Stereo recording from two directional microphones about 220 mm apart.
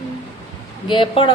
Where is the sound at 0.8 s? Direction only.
20° left (ahead or behind).